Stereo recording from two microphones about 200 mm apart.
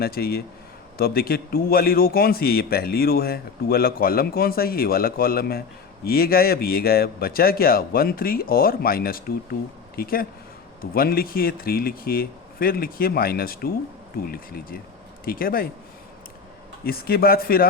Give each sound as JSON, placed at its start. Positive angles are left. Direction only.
{"t": 0.0, "sound": "a man's voice", "side_deg": 50}
{"t": 16.8, "sound": "a man's voice", "side_deg": 50}